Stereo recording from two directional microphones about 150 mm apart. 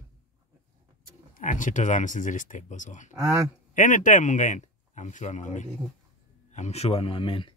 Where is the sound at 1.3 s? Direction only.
60° left (ahead or behind); by 7.5 s 35° left (ahead or behind).